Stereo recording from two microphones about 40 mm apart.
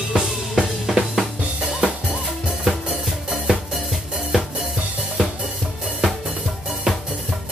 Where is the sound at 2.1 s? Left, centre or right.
Right.